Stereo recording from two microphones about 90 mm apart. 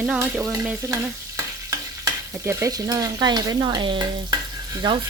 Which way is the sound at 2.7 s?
40° right (ahead or behind).